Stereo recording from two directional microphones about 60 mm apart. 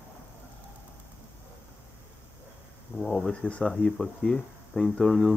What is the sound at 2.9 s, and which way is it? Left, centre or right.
Speech, centre.